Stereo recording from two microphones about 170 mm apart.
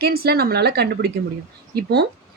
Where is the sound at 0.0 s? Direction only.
65° right (ahead or behind).